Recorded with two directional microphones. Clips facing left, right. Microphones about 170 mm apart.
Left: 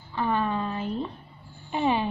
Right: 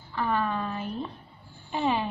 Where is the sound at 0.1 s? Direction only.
20° left (ahead or behind).